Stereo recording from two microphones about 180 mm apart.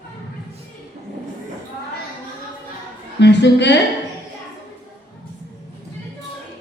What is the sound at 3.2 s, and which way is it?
Speech, 75° left (ahead or behind).